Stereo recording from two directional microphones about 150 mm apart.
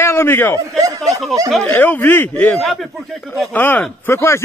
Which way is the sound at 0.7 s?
20° right (ahead or behind).